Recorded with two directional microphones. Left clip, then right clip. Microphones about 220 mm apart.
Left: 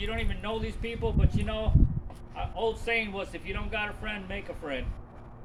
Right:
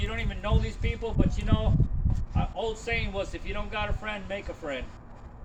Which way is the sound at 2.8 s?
5° left (ahead or behind).